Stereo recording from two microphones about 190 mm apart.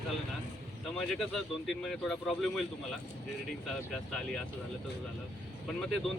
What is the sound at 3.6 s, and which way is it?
Speech, 5° left (ahead or behind).